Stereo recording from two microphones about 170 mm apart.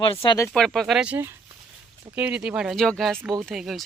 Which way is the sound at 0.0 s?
30° left (ahead or behind).